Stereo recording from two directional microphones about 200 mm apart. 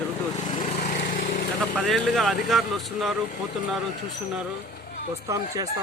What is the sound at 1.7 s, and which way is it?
Speech, centre (ahead or behind).